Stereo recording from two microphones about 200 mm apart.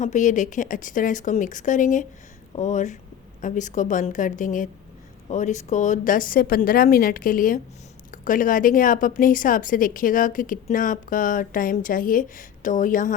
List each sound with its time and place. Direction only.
0.0 s a woman's voice: 40° left (ahead or behind)